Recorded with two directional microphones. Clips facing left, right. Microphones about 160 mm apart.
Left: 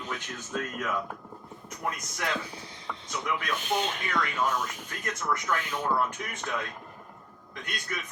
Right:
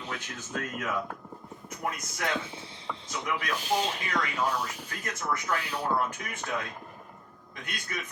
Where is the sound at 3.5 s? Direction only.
35° right (ahead or behind).